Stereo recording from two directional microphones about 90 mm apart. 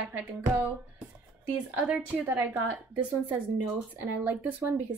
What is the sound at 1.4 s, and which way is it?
Speech, 15° right (ahead or behind).